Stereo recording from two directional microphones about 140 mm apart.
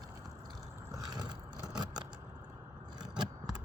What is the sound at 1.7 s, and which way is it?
Vehicle, 30° right (ahead or behind).